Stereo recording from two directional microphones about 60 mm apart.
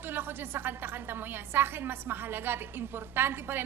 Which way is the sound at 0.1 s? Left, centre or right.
Right.